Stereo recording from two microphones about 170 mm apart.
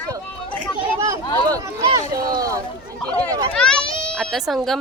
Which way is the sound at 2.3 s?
20° right (ahead or behind).